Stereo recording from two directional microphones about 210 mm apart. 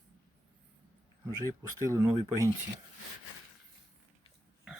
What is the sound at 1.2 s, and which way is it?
Speech, 15° right (ahead or behind).